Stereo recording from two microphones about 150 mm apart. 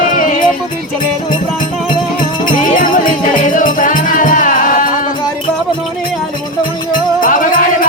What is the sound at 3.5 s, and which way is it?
Music, 60° left (ahead or behind).